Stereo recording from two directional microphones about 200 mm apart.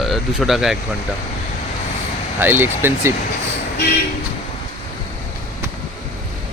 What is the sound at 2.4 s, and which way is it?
Speech, 10° right (ahead or behind).